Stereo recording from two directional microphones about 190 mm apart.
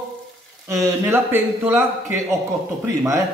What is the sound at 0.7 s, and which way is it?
Speech, 15° right (ahead or behind).